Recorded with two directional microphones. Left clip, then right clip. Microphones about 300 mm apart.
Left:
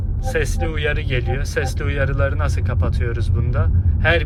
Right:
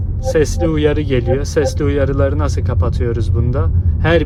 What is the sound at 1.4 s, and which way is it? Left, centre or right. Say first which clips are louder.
Speech: right 8 dB; centre.